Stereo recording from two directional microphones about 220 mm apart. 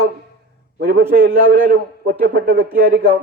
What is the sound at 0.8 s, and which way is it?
A man's voice, 45° right (ahead or behind).